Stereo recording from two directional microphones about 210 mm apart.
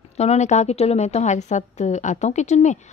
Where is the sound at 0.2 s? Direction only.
30° left (ahead or behind).